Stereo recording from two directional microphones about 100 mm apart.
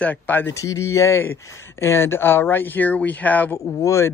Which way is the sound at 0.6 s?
30° left (ahead or behind).